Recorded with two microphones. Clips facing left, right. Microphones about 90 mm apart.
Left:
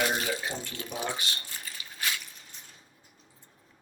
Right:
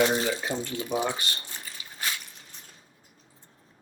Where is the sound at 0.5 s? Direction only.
55° right (ahead or behind).